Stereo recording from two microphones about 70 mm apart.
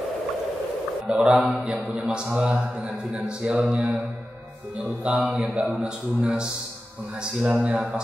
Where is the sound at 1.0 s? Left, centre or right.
Centre.